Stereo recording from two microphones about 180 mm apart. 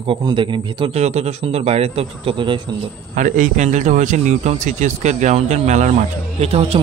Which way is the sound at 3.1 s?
45° right (ahead or behind).